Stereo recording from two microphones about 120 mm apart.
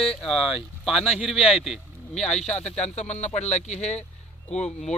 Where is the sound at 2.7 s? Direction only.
65° left (ahead or behind).